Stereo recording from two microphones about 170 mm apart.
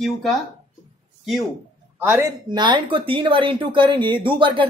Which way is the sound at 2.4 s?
25° right (ahead or behind).